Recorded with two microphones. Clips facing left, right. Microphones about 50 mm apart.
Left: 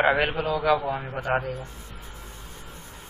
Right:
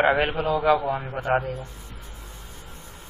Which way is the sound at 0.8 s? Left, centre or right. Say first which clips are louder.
Right 2 dB; centre.